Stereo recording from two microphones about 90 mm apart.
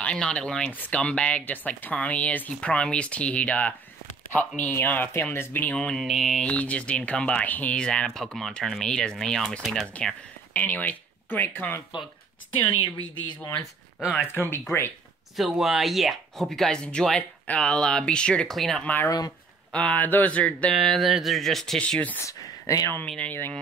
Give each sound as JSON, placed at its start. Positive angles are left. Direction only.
{"t": 0.0, "sound": "speech", "side_deg": 10}
{"t": 5.7, "sound": "speech", "side_deg": 10}
{"t": 6.4, "sound": "speech", "side_deg": 15}
{"t": 10.5, "sound": "speech", "side_deg": 20}
{"t": 12.8, "sound": "a woman's voice", "side_deg": 60}
{"t": 14.2, "sound": "speech", "side_deg": 25}
{"t": 15.3, "sound": "speech", "side_deg": -5}
{"t": 19.0, "sound": "speech", "side_deg": 45}
{"t": 19.7, "sound": "speech", "side_deg": 15}
{"t": 20.7, "sound": "speech", "side_deg": 0}
{"t": 22.2, "sound": "speech", "side_deg": 35}
{"t": 23.0, "sound": "speech", "side_deg": 15}